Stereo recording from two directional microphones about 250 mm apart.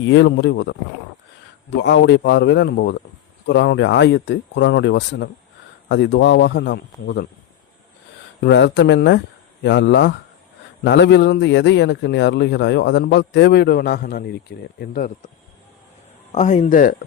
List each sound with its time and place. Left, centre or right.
0.0 s speech: left
8.4 s speech: left
16.3 s a man's voice: left